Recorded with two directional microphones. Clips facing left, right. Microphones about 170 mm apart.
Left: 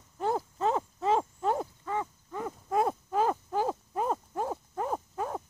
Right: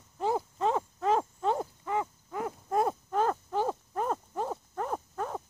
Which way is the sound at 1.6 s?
15° right (ahead or behind).